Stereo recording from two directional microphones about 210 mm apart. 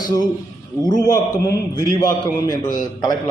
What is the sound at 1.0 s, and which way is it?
A man's voice, 15° left (ahead or behind).